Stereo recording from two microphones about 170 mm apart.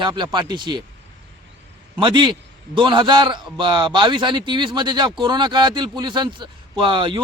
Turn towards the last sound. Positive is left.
turn(degrees=-30)  # may be behind; listen again after turning